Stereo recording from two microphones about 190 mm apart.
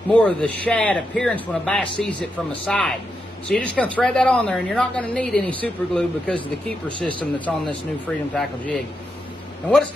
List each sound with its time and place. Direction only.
0.1 s a man's voice: 5° left (ahead or behind)